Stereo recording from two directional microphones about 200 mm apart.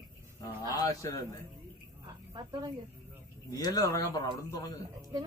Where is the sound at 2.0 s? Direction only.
20° right (ahead or behind).